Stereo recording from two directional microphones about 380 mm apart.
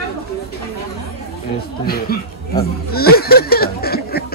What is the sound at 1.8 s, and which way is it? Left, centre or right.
Speech, left.